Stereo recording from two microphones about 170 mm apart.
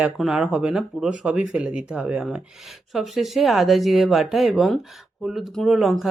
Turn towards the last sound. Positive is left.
turn(degrees=0)  # may be behind; listen again after turning